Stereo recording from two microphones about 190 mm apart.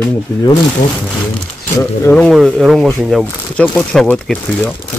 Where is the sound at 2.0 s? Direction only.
5° left (ahead or behind).